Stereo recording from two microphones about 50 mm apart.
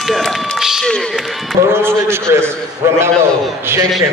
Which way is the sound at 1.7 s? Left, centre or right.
Right.